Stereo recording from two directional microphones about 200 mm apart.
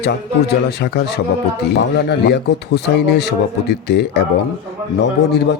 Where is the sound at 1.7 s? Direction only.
55° left (ahead or behind).